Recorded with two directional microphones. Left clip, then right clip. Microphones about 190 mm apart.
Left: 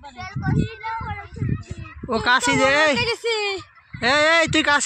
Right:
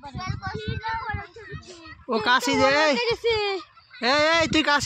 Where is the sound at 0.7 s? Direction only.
20° left (ahead or behind).